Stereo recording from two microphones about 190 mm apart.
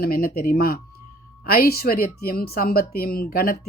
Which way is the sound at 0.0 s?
50° left (ahead or behind).